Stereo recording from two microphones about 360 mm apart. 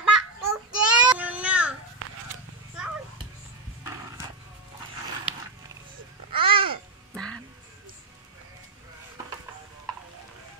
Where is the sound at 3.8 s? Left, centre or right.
Centre.